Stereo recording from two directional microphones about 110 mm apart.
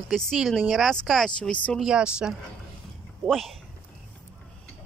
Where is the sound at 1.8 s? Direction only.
5° right (ahead or behind).